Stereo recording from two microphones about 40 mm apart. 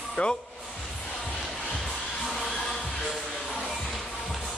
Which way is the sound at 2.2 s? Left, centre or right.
Centre.